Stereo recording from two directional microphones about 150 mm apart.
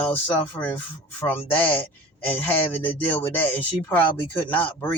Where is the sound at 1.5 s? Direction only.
10° left (ahead or behind).